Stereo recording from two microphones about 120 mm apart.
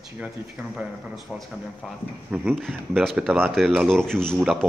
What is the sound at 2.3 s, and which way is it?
Speech, 10° right (ahead or behind).